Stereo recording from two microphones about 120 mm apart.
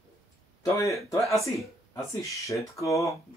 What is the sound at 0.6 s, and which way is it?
Speech, 25° left (ahead or behind).